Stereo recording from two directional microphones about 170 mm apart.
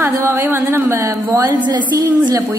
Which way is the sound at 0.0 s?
15° right (ahead or behind).